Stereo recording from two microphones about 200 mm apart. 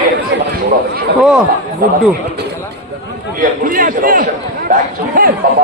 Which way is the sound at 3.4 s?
45° right (ahead or behind).